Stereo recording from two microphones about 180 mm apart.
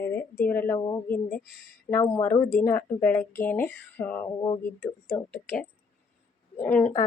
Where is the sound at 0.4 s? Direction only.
10° left (ahead or behind).